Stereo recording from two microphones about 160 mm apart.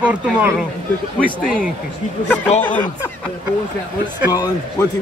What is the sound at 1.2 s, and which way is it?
Speech, 5° left (ahead or behind).